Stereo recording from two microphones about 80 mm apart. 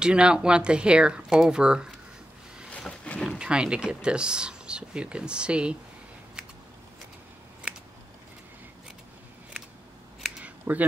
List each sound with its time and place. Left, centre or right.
0.0 s speech: centre
3.3 s speech: centre
10.4 s scissors: centre